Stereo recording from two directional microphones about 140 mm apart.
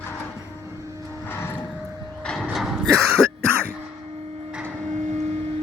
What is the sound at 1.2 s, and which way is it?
Vehicle, 15° left (ahead or behind).